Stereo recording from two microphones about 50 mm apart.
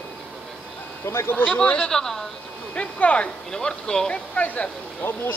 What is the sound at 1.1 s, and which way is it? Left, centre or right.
Speech, left.